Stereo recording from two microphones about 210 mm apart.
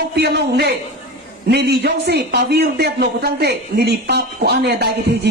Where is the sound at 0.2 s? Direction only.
50° right (ahead or behind).